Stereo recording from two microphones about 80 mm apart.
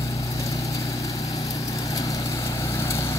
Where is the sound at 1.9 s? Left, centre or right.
Left.